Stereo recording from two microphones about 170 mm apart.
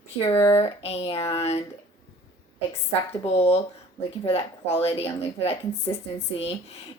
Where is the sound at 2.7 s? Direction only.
35° left (ahead or behind).